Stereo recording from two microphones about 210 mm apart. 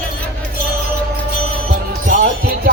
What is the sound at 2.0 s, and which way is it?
Music, 45° right (ahead or behind).